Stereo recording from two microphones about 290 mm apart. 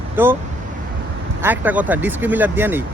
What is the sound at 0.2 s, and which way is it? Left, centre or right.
Speech, centre.